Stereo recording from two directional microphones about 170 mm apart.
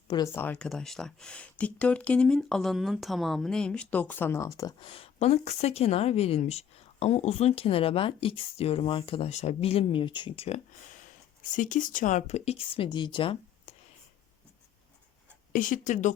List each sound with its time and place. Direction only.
0.3 s speech: 10° left (ahead or behind)
4.9 s a woman's voice: 35° left (ahead or behind)
11.5 s a woman's voice: 50° left (ahead or behind); by 13.7 s 30° left (ahead or behind)
15.5 s speech: 50° left (ahead or behind)